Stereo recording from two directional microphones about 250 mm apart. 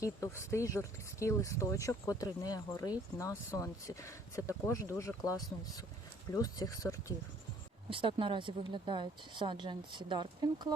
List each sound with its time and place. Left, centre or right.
0.0 s speech: centre
7.9 s speech: centre